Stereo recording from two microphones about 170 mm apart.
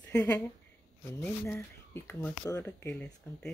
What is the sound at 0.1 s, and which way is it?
Speech, 10° left (ahead or behind).